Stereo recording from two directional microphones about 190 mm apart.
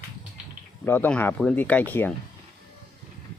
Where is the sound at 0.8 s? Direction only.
10° left (ahead or behind).